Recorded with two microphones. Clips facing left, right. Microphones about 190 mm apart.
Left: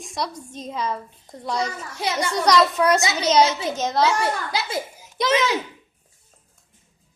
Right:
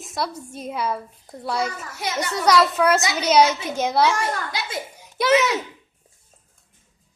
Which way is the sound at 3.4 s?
30° left (ahead or behind).